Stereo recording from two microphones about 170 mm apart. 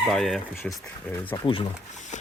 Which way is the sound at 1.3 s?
30° left (ahead or behind).